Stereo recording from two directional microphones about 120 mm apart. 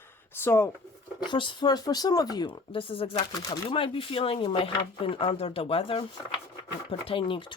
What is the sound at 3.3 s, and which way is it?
Speech, 30° left (ahead or behind).